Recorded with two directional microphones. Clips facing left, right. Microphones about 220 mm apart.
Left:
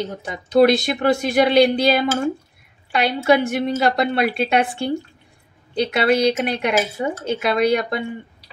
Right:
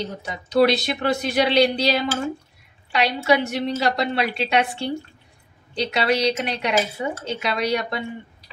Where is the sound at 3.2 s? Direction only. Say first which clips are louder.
Left 5 dB; 50° left (ahead or behind).